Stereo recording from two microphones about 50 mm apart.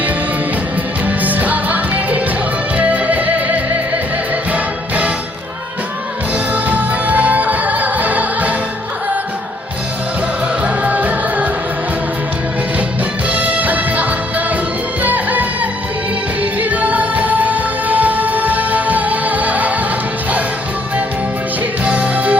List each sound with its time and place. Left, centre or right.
1.0 s music: right
6.3 s music: right
10.6 s music: right
13.2 s music: right
21.8 s music: right